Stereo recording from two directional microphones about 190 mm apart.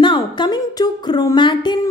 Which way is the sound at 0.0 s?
25° left (ahead or behind).